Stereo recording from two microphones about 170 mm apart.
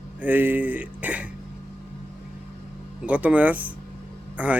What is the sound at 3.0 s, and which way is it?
A man's voice, 10° right (ahead or behind).